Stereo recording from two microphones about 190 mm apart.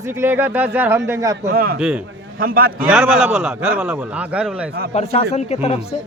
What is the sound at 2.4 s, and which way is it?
Speech, 50° right (ahead or behind).